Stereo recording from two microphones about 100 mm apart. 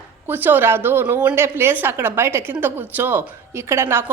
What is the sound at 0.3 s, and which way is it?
A woman's voice, 20° right (ahead or behind).